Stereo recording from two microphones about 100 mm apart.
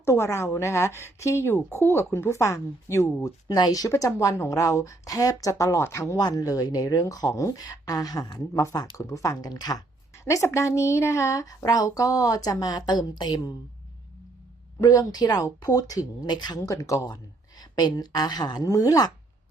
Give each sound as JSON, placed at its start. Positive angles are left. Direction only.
{"t": 0.0, "sound": "a woman's voice", "side_deg": 25}
{"t": 10.2, "sound": "speech", "side_deg": 30}
{"t": 14.8, "sound": "speech", "side_deg": 35}
{"t": 17.6, "sound": "speech", "side_deg": 45}